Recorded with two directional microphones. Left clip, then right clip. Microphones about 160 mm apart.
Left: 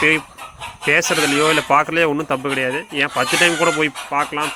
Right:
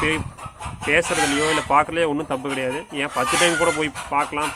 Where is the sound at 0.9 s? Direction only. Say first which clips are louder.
Left 3 dB; 25° left (ahead or behind).